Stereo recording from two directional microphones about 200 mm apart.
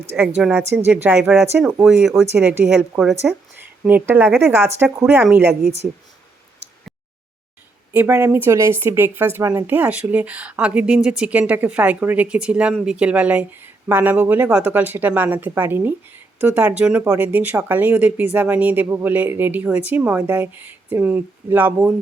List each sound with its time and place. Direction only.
0.3 s a woman's voice: 5° right (ahead or behind)
7.9 s speech: 10° right (ahead or behind)